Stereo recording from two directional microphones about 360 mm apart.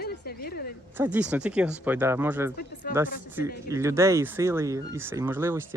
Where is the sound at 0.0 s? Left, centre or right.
Left.